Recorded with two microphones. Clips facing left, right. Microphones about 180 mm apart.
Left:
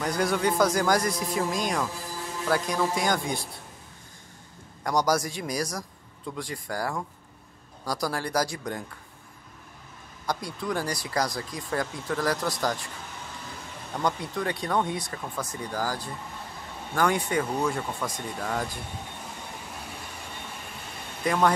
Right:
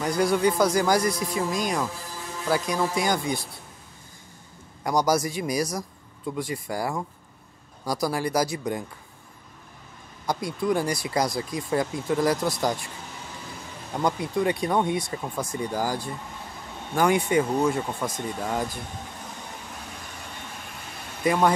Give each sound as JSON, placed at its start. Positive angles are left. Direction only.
{"t": 0.0, "sound": "speech", "side_deg": -5}
{"t": 4.8, "sound": "speech", "side_deg": -5}
{"t": 10.2, "sound": "speech", "side_deg": -10}
{"t": 13.9, "sound": "speech", "side_deg": -10}
{"t": 21.2, "sound": "speech", "side_deg": -10}